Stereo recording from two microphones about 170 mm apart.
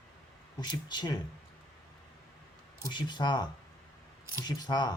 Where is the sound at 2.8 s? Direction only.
25° left (ahead or behind).